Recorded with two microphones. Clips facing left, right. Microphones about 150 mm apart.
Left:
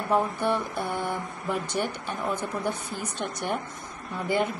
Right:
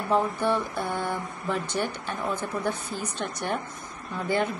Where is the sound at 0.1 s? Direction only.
15° left (ahead or behind).